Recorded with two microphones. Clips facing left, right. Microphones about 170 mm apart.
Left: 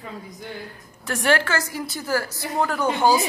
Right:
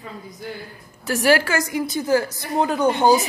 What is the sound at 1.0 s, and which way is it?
A woman's voice, 10° right (ahead or behind).